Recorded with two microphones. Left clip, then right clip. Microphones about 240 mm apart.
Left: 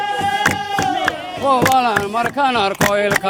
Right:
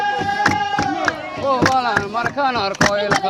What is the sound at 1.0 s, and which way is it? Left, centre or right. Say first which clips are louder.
Chop: left 2 dB; left.